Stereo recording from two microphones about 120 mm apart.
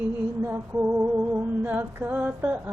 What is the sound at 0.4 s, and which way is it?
Music, 15° right (ahead or behind).